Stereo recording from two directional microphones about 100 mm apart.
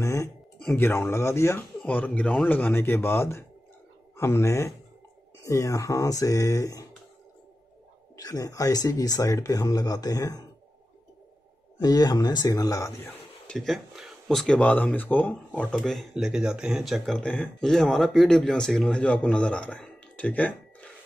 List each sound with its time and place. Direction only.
0.0 s speech: 30° left (ahead or behind)
1.9 s speech: 15° left (ahead or behind); by 6.9 s 35° left (ahead or behind)
8.2 s speech: 35° left (ahead or behind)
11.8 s speech: 40° left (ahead or behind)
13.5 s speech: 5° left (ahead or behind)
15.8 s speech: centre (ahead or behind)